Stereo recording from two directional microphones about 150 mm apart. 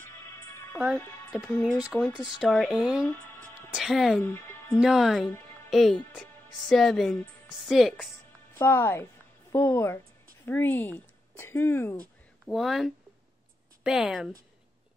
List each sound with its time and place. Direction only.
0.9 s speech: centre (ahead or behind)
4.2 s music: 15° left (ahead or behind)
4.7 s speech: 5° right (ahead or behind)
8.5 s speech: 15° left (ahead or behind)
12.4 s speech: centre (ahead or behind)